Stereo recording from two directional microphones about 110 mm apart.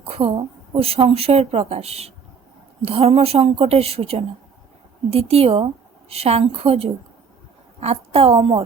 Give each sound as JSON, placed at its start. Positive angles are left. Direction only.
{"t": 0.0, "sound": "a woman's voice", "side_deg": -55}